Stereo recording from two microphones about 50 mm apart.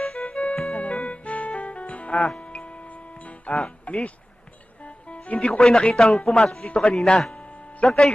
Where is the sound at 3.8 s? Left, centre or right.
Left.